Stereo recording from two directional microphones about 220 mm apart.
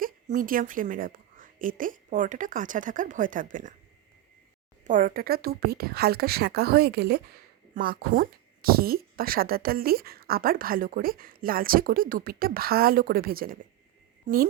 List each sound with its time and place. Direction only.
0.0 s a woman's voice: 40° right (ahead or behind)
4.8 s speech: 35° right (ahead or behind)